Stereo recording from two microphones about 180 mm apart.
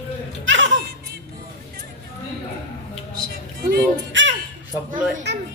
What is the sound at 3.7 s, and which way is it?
Music, 90° right.